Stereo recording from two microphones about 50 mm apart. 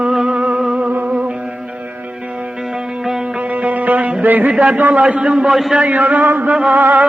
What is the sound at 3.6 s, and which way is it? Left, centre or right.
Music, right.